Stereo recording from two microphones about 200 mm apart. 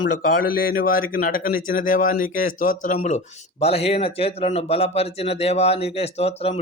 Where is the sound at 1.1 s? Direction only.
45° left (ahead or behind).